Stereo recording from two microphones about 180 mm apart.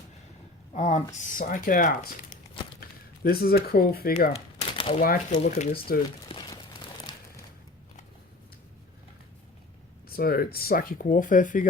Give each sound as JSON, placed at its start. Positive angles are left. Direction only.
{"t": 0.7, "sound": "speech", "side_deg": 40}
{"t": 3.2, "sound": "speech", "side_deg": 55}
{"t": 4.3, "sound": "a sound", "side_deg": 30}
{"t": 5.4, "sound": "speech", "side_deg": 40}
{"t": 6.2, "sound": "a sound", "side_deg": 25}
{"t": 10.1, "sound": "speech", "side_deg": 60}